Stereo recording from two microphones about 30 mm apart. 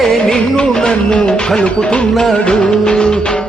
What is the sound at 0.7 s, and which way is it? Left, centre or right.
Music, left.